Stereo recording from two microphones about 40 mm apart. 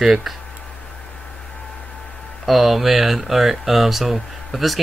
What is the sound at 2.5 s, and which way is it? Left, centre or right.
Speech, centre.